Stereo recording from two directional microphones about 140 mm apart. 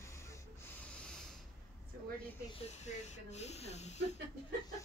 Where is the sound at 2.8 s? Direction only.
50° left (ahead or behind).